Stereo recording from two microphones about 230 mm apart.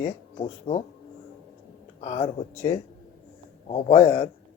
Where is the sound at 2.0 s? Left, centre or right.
Left.